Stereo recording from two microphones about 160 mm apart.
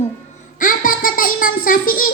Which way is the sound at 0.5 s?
60° left (ahead or behind).